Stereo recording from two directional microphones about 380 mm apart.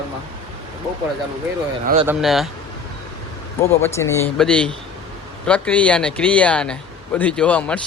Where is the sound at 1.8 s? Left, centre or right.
Centre.